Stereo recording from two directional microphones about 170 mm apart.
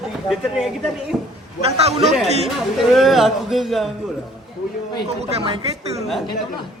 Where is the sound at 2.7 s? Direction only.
Centre (ahead or behind).